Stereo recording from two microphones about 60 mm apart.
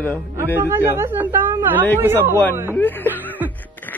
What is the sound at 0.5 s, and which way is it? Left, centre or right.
Speech, right.